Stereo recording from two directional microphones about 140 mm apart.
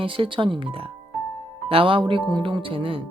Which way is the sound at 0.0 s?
40° right (ahead or behind).